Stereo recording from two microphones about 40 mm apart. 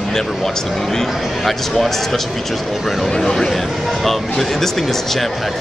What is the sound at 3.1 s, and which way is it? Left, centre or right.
Speech, centre.